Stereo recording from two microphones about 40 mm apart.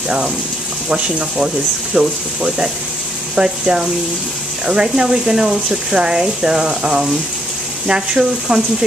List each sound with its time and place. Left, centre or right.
0.8 s speech: right